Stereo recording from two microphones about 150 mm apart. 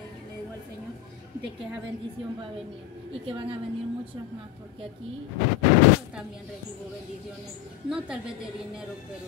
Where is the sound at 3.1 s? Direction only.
40° right (ahead or behind).